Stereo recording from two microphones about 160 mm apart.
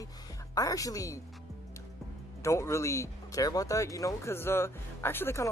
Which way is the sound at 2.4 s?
20° left (ahead or behind).